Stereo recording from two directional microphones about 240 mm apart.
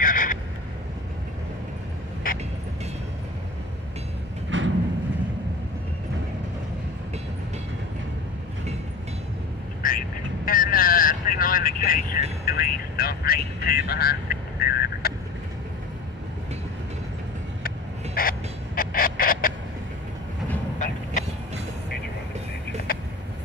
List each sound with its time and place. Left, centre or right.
0.0 s vehicle: left
2.3 s vehicle: left
4.5 s vehicle: right
9.8 s vehicle: left
13.7 s speech: left
14.6 s duck: left
17.6 s a sound: left
20.8 s train: left
22.9 s vehicle: left